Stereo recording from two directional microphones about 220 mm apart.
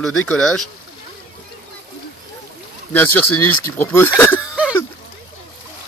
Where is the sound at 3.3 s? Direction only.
90° left.